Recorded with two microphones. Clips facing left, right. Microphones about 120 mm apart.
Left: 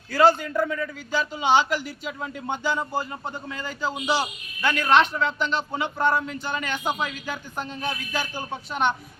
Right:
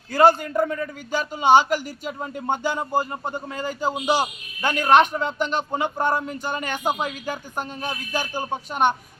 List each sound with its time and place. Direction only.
0.1 s speech: 50° right (ahead or behind)